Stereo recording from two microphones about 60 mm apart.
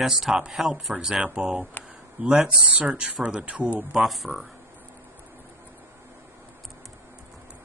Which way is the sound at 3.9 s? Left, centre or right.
Centre.